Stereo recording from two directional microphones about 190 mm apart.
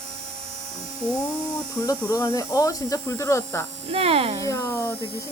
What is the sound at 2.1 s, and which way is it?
Speech, 20° left (ahead or behind).